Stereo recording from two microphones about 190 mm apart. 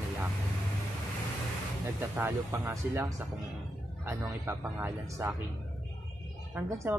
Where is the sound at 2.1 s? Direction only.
10° right (ahead or behind).